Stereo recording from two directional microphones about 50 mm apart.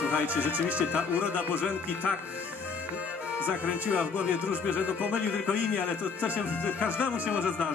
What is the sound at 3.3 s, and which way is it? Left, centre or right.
Speech, right.